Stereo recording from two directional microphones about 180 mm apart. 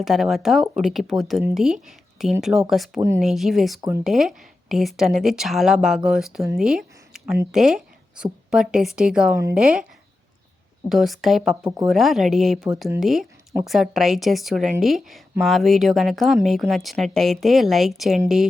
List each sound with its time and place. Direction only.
0.0 s speech: centre (ahead or behind)
3.8 s speech: 15° right (ahead or behind)
4.0 s speech: centre (ahead or behind)
10.8 s speech: centre (ahead or behind)